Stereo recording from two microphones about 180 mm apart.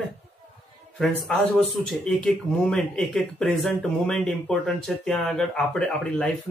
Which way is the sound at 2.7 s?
5° left (ahead or behind).